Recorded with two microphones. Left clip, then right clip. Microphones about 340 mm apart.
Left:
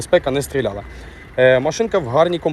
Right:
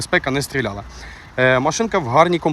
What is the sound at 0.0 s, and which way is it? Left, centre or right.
Speech, centre.